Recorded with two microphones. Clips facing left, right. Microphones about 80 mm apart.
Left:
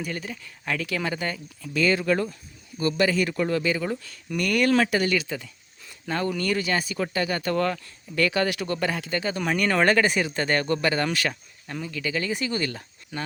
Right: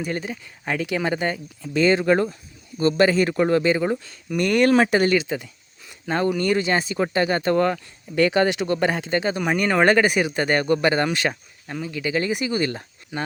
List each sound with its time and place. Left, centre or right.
0.0 s speech: right
5.1 s speech: right